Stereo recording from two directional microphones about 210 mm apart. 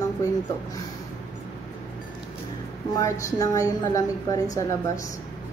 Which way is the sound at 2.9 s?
15° left (ahead or behind).